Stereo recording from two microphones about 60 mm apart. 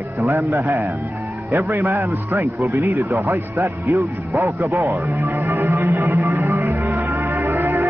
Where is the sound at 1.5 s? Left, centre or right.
Right.